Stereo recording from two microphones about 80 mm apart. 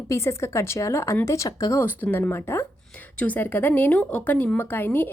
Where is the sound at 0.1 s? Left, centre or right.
Left.